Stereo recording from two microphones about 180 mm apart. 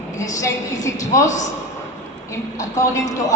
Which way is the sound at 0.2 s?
15° left (ahead or behind).